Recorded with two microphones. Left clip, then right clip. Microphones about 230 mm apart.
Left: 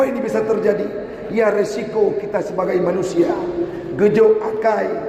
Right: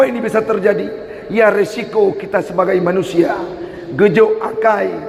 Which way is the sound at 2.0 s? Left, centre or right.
Right.